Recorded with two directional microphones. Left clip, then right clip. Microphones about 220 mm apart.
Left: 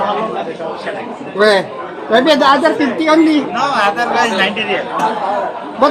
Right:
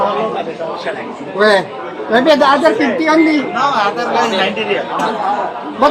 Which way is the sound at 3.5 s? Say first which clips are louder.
Even; 35° left (ahead or behind).